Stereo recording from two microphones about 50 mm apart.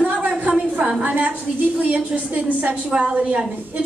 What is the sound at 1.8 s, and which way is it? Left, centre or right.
A woman's voice, right.